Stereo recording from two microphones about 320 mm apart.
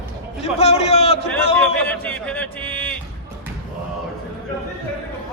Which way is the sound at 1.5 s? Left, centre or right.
Centre.